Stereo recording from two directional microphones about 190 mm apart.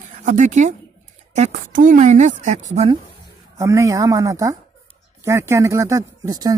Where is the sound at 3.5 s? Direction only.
15° right (ahead or behind).